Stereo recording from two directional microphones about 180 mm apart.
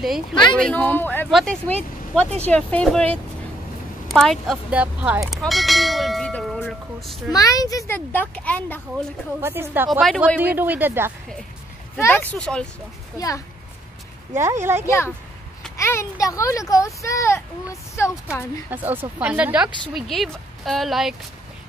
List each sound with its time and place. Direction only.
0.3 s speech: 25° left (ahead or behind)
0.6 s speech: 5° left (ahead or behind)
7.3 s speech: 20° left (ahead or behind)
9.4 s speech: 10° right (ahead or behind)
9.8 s speech: centre (ahead or behind)
12.0 s speech: 10° left (ahead or behind)
14.3 s speech: 15° right (ahead or behind)
14.9 s speech: 15° left (ahead or behind)
18.7 s speech: 10° right (ahead or behind)